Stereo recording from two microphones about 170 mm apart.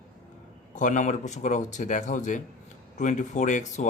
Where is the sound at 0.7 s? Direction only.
50° left (ahead or behind).